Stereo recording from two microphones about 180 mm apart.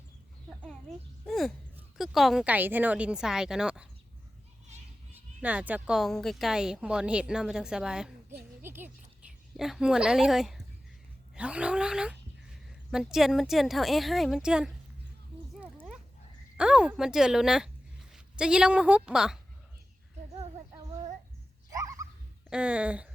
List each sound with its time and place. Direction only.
0.6 s speech: 5° left (ahead or behind)
5.4 s speech: 10° right (ahead or behind)
8.6 s music: 10° right (ahead or behind)
9.6 s speech: centre (ahead or behind)
15.6 s dog: 10° right (ahead or behind)
16.6 s a woman's voice: 5° right (ahead or behind)
21.7 s a sound: 20° right (ahead or behind)
22.4 s speech: 5° right (ahead or behind)